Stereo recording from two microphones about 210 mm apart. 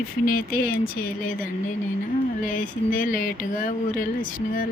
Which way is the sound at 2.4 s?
40° left (ahead or behind).